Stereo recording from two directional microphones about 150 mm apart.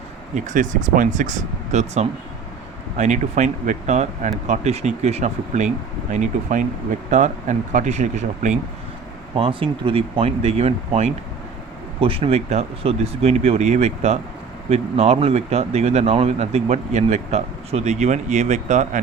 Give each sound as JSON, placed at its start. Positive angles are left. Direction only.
{"t": 0.3, "sound": "speech", "side_deg": -55}
{"t": 9.3, "sound": "speech", "side_deg": -35}